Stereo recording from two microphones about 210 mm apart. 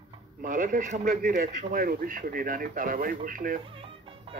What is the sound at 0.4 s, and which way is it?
Speech, 40° right (ahead or behind).